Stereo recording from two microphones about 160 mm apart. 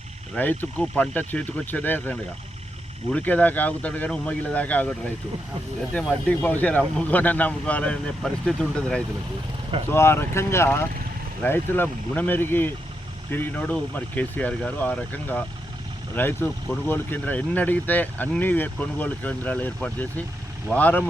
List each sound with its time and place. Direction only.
0.3 s speech: 10° left (ahead or behind)
6.2 s speech: 10° left (ahead or behind)